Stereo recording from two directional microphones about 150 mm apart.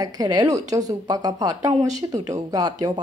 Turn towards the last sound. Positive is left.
turn(degrees=-25)  # may be behind; listen again after turning